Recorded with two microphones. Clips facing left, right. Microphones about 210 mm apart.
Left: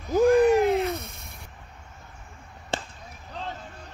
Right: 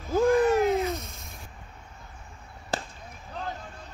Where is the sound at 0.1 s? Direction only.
15° left (ahead or behind).